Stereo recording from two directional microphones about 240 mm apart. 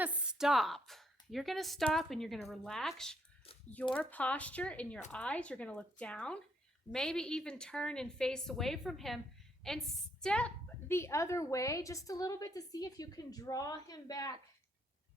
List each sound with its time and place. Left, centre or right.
0.0 s a woman's voice: centre